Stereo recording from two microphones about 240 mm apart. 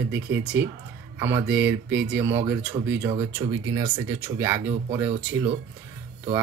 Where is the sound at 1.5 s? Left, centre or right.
Centre.